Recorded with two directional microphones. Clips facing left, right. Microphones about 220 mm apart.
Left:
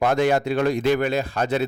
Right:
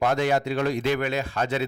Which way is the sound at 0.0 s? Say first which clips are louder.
Left 3 dB; 50° left (ahead or behind).